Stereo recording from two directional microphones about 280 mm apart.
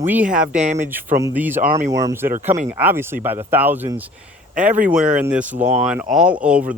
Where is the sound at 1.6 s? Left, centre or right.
Right.